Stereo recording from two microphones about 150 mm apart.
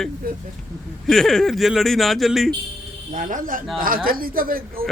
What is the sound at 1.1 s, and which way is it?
A man's voice, 5° left (ahead or behind).